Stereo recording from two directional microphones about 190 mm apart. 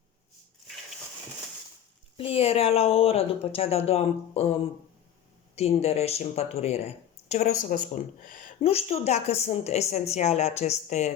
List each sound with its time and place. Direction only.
2.1 s speech: 30° left (ahead or behind)
5.5 s speech: 35° left (ahead or behind)
8.6 s speech: 30° left (ahead or behind)